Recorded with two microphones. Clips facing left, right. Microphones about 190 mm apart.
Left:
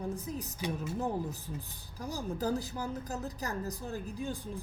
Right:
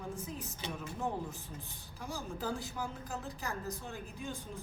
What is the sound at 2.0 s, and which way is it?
A woman's voice, 40° left (ahead or behind).